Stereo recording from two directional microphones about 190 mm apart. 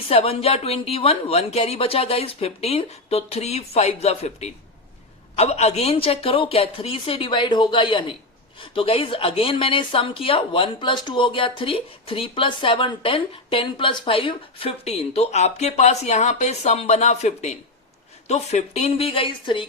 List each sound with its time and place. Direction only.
0.1 s speech: 30° left (ahead or behind)